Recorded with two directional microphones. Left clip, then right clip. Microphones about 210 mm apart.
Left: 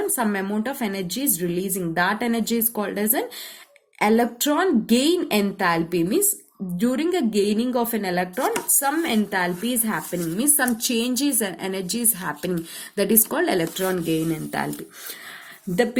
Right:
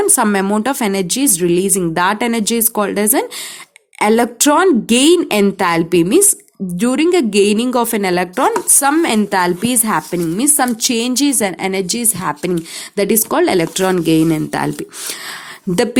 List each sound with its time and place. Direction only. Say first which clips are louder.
0.0 s speech: right 10 dB; 50° right (ahead or behind)